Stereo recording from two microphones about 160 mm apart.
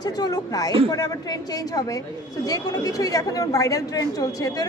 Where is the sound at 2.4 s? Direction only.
20° left (ahead or behind).